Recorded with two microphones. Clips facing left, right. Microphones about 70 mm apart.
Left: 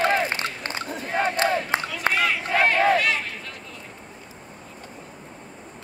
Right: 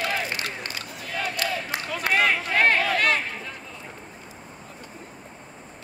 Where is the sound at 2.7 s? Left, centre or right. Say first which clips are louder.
Left 5 dB; left.